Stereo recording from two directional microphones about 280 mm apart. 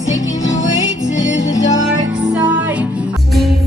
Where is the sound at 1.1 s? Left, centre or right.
Left.